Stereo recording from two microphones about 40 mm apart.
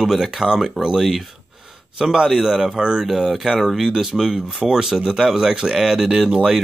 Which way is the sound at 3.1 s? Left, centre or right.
Centre.